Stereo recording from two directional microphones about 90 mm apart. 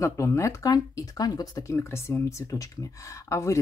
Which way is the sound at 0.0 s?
35° left (ahead or behind).